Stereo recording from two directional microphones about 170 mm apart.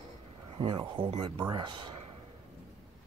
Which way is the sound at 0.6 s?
30° right (ahead or behind).